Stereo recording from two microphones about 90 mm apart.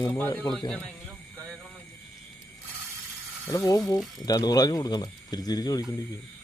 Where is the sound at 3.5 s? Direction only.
40° left (ahead or behind).